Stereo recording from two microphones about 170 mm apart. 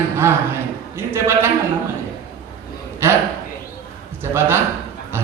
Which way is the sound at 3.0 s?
15° right (ahead or behind).